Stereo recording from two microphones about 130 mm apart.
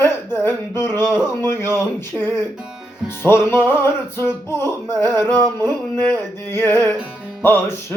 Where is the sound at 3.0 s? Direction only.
20° left (ahead or behind).